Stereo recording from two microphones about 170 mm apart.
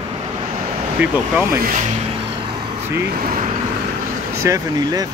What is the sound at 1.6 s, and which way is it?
Speech, 50° right (ahead or behind).